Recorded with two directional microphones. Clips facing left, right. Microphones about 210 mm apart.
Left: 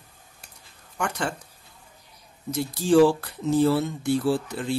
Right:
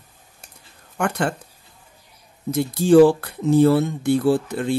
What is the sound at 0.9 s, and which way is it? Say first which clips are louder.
Speech: right 6 dB; 55° right (ahead or behind).